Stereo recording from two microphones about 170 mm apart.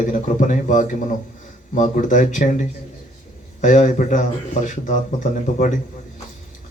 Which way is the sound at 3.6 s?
50° left (ahead or behind).